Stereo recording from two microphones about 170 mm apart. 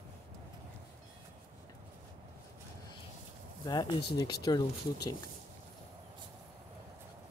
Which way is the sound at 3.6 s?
25° left (ahead or behind).